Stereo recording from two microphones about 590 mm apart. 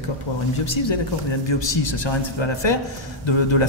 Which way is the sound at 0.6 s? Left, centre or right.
Left.